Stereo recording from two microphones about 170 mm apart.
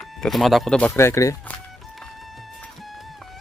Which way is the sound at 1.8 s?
Centre (ahead or behind).